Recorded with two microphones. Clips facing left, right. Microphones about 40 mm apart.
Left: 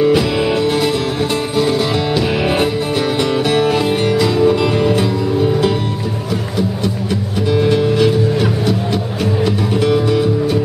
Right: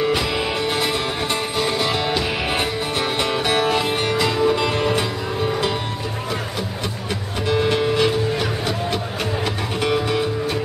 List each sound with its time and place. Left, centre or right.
0.0 s music: centre
7.4 s music: centre